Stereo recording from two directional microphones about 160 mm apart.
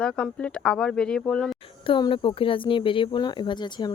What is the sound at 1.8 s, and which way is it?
Speech, 30° left (ahead or behind).